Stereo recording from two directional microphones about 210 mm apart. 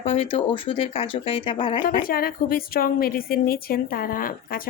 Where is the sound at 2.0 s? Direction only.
45° left (ahead or behind).